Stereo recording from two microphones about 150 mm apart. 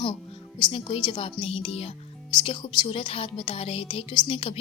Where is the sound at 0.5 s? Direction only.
35° left (ahead or behind).